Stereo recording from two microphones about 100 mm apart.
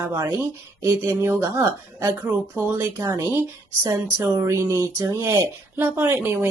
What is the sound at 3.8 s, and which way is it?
Speech, 30° right (ahead or behind).